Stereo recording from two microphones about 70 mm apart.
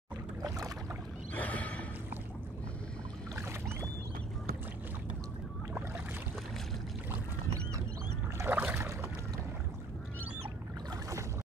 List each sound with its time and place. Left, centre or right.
1.3 s neigh: left
8.5 s boat: right
8.7 s boat: right